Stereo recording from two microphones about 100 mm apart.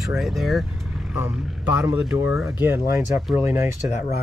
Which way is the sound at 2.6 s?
25° right (ahead or behind).